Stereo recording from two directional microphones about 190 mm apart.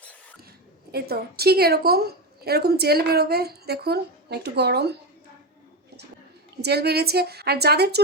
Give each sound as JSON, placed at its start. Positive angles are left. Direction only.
{"t": 0.0, "sound": "a sound", "side_deg": 10}
{"t": 0.9, "sound": "a woman's voice", "side_deg": -55}
{"t": 6.6, "sound": "a woman's voice", "side_deg": -60}